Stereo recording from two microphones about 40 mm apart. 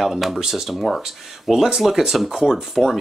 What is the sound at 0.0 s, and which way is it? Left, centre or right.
Speech, centre.